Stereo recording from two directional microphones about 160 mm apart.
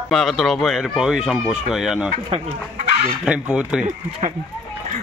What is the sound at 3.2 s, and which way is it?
Speech, 5° right (ahead or behind).